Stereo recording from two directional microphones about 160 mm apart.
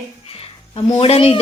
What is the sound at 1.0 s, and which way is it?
Speech, 40° left (ahead or behind).